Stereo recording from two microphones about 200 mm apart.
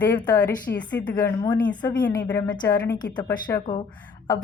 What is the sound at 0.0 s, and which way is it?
Speech, 10° left (ahead or behind).